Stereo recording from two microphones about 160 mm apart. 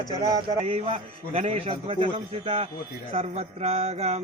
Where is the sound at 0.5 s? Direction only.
40° right (ahead or behind).